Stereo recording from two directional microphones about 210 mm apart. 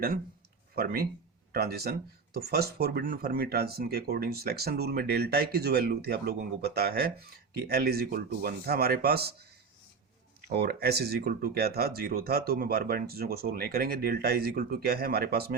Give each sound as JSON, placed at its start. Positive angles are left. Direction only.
{"t": 0.8, "sound": "speech", "side_deg": -45}
{"t": 10.5, "sound": "speech", "side_deg": -50}